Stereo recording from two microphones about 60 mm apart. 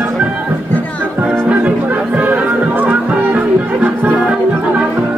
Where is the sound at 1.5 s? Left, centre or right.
Right.